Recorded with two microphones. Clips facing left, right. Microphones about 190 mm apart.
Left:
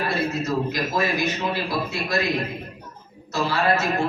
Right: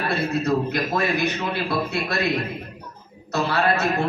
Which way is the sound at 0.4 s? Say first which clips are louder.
Right 2 dB; 60° right (ahead or behind).